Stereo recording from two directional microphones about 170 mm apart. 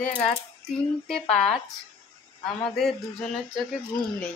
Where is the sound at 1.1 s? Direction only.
5° left (ahead or behind).